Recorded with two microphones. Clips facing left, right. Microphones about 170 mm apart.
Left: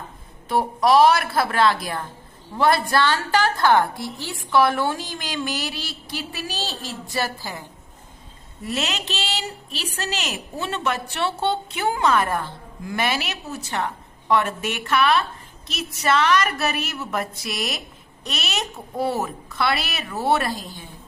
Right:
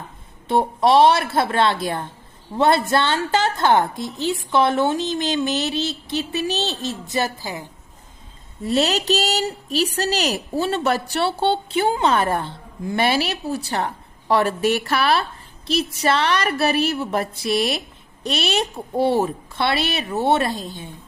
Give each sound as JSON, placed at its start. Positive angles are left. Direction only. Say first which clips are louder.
{"t": 0.4, "sound": "a woman's voice", "louder": "right 2 dB", "side_deg": -25}
{"t": 8.6, "sound": "a woman's voice", "louder": "right 8 dB", "side_deg": -35}